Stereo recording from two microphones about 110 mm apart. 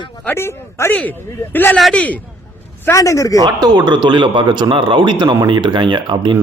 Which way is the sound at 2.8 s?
30° left (ahead or behind).